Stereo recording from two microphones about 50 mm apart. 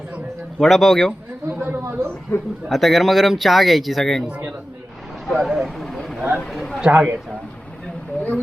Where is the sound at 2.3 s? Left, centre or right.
Left.